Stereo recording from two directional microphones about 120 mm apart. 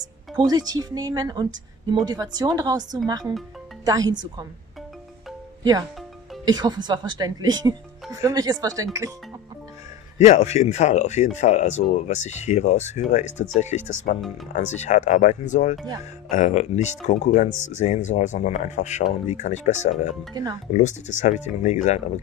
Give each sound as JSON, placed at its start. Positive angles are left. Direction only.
{"t": 0.5, "sound": "speech", "side_deg": -35}
{"t": 5.6, "sound": "speech", "side_deg": -30}
{"t": 10.1, "sound": "speech", "side_deg": 75}
{"t": 16.0, "sound": "speech", "side_deg": 80}
{"t": 19.2, "sound": "speech", "side_deg": 80}